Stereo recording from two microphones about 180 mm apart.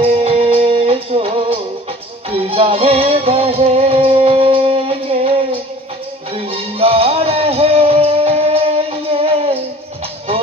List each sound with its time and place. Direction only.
0.0 s music: 30° right (ahead or behind)